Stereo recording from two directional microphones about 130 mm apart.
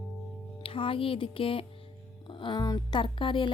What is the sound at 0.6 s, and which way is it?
A woman's voice, 45° left (ahead or behind).